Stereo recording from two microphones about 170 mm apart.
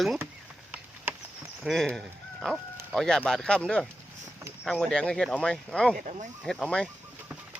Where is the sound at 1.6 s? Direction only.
Centre (ahead or behind).